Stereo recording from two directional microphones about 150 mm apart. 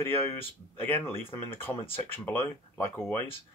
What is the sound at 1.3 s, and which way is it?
Speech, 15° left (ahead or behind).